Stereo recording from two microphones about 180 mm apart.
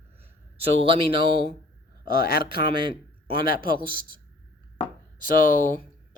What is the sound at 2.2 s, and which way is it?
Speech, 55° left (ahead or behind).